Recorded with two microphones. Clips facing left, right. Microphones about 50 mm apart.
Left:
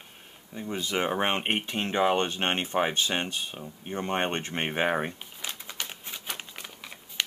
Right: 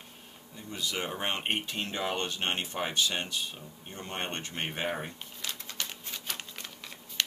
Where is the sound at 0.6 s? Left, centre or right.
Left.